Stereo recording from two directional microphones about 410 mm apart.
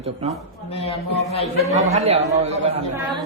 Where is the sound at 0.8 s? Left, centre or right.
Centre.